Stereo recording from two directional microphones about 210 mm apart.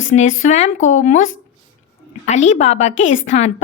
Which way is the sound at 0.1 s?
35° left (ahead or behind).